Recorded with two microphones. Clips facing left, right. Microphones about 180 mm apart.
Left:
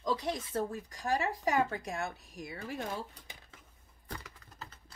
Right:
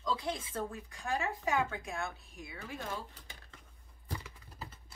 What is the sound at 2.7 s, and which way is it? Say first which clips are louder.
Speech: left 2 dB; 15° left (ahead or behind).